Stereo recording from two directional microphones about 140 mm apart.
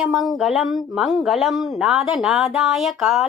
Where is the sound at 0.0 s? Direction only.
Centre (ahead or behind).